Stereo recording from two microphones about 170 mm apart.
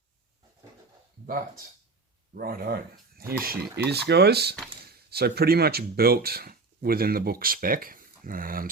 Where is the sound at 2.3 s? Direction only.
60° right (ahead or behind).